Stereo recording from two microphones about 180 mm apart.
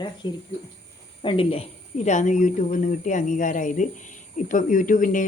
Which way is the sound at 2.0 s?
40° left (ahead or behind).